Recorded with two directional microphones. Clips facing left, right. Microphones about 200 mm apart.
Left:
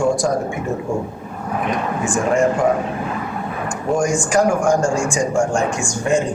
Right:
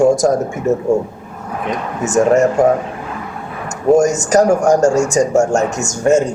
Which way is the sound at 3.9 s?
40° right (ahead or behind).